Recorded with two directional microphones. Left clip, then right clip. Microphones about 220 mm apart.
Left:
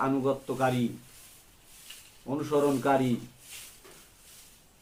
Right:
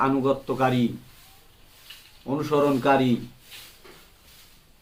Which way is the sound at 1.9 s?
45° left (ahead or behind).